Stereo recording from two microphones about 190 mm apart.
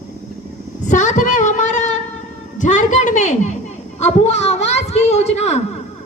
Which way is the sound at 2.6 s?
40° left (ahead or behind).